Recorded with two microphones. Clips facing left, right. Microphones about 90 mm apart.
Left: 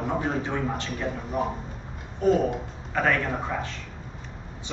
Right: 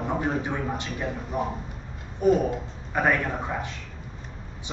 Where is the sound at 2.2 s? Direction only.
15° right (ahead or behind).